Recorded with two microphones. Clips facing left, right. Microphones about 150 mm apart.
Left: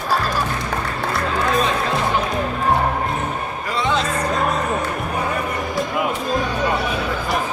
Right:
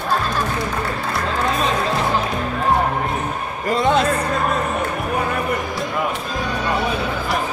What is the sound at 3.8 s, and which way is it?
Music, 50° right (ahead or behind).